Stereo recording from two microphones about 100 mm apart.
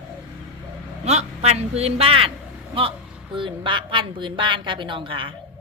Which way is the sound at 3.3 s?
55° right (ahead or behind).